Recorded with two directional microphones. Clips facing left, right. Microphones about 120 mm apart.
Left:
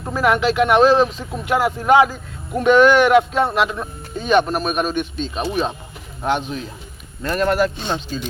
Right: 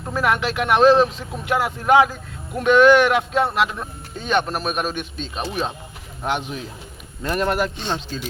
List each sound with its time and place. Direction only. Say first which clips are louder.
0.1 s a man's voice: left 4 dB; centre (ahead or behind)
6.2 s speech: left 4 dB; 10° right (ahead or behind)
7.8 s a man's voice: left 2 dB; 5° left (ahead or behind)